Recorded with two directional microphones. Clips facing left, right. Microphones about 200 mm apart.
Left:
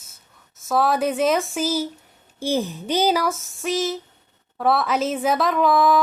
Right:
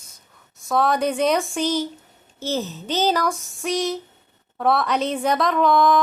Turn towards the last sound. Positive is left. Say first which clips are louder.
# even
turn(degrees=5)  # may be behind; listen again after turning